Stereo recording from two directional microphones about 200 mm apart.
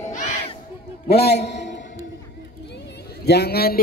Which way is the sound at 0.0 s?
35° left (ahead or behind).